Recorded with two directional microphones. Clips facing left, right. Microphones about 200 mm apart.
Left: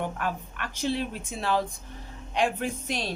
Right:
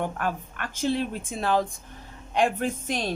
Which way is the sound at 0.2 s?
45° right (ahead or behind).